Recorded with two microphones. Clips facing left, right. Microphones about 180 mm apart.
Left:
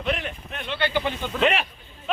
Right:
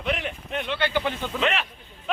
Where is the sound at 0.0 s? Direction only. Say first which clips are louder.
Left 1 dB; 15° right (ahead or behind).